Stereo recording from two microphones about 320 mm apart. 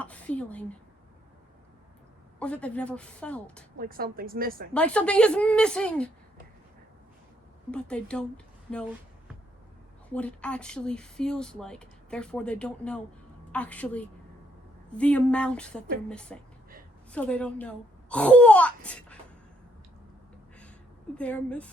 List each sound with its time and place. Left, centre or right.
0.0 s speech: centre
2.4 s speech: centre
3.8 s a woman's voice: right
4.7 s speech: centre
7.7 s speech: centre
8.7 s a sound: centre
10.1 s speech: centre
21.2 s speech: centre